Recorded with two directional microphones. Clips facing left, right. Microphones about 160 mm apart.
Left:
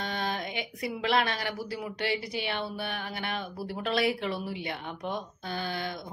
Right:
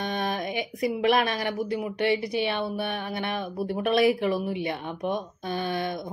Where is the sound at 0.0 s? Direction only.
20° right (ahead or behind).